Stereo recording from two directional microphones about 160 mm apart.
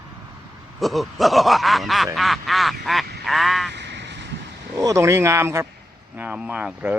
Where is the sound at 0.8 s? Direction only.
Centre (ahead or behind).